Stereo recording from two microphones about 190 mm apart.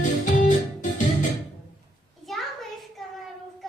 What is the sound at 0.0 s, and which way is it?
Organ, 40° left (ahead or behind).